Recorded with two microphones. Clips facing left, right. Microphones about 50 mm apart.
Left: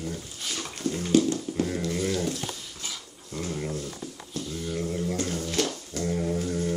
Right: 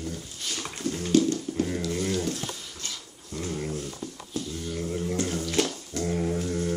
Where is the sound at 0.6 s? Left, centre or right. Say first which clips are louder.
Left 1 dB; centre.